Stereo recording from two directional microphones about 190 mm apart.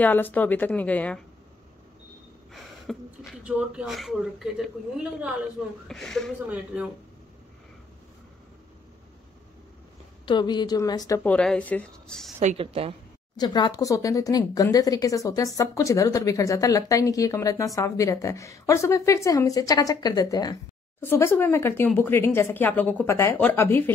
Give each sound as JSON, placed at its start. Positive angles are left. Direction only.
{"t": 0.0, "sound": "speech", "side_deg": 10}
{"t": 2.5, "sound": "a woman's voice", "side_deg": 0}
{"t": 10.2, "sound": "a woman's voice", "side_deg": 25}
{"t": 11.2, "sound": "a woman's voice", "side_deg": 5}
{"t": 12.4, "sound": "a woman's voice", "side_deg": -35}
{"t": 13.4, "sound": "speech", "side_deg": 20}